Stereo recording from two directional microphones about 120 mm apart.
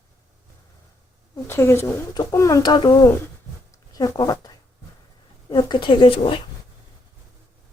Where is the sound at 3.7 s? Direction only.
30° left (ahead or behind).